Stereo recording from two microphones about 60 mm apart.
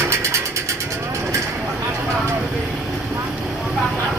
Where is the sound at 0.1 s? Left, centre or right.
Right.